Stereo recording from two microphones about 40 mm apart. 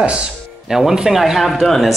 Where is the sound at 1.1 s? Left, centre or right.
Centre.